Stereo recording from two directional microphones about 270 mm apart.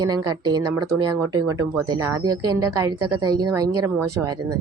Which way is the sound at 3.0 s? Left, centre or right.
Right.